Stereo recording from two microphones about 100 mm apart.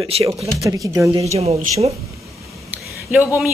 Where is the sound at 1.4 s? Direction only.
90° right.